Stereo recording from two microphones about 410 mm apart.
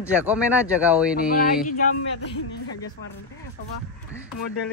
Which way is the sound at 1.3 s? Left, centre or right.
Left.